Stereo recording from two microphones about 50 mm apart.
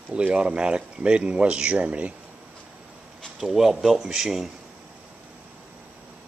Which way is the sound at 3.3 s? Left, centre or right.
Centre.